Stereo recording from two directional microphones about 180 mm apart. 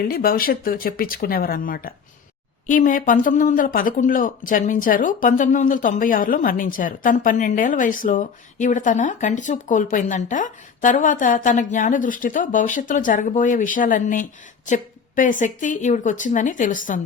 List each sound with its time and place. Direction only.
0.1 s speech: 55° left (ahead or behind)